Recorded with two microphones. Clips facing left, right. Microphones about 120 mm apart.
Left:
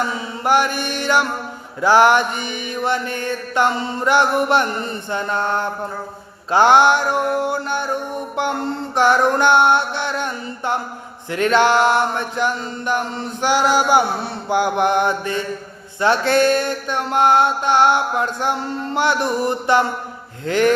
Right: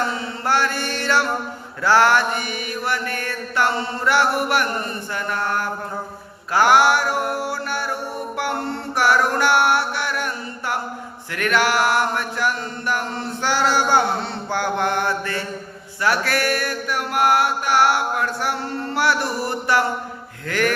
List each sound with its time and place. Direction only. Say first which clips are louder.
0.1 s mantra: left 4 dB; 15° left (ahead or behind)